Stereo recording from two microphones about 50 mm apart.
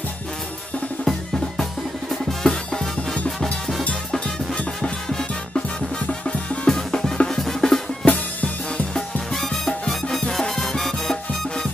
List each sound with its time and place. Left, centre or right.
1.0 s drum: centre
4.6 s music: centre
6.7 s drum: centre
8.0 s music: left
9.3 s music: centre